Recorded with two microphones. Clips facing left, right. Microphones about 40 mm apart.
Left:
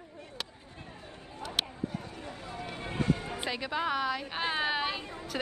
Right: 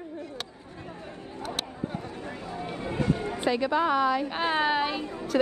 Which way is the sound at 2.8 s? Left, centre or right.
Right.